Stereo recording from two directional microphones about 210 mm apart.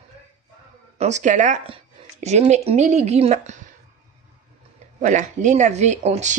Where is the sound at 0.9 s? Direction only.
35° right (ahead or behind).